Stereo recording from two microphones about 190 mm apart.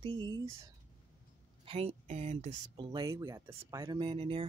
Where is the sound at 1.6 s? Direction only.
30° right (ahead or behind).